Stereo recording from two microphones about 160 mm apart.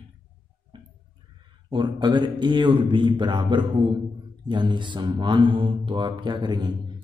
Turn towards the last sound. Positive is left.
turn(degrees=-25)  # may be behind; listen again after turning